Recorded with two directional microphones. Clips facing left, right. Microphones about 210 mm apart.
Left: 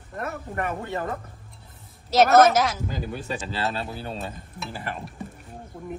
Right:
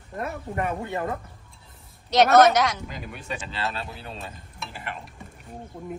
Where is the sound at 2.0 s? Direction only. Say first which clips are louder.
Even; centre (ahead or behind).